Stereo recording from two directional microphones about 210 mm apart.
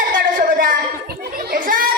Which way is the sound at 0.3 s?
40° right (ahead or behind).